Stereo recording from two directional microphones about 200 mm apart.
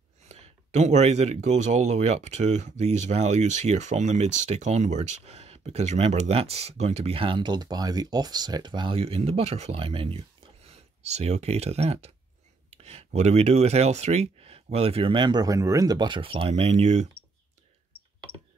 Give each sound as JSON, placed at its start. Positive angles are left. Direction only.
{"t": 0.3, "sound": "speech", "side_deg": -35}